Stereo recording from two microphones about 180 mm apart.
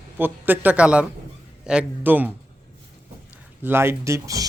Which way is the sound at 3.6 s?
15° right (ahead or behind).